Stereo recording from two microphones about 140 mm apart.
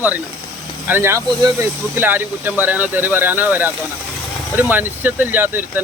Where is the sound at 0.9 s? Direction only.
15° right (ahead or behind).